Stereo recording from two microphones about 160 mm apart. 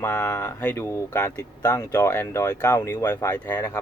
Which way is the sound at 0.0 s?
15° left (ahead or behind).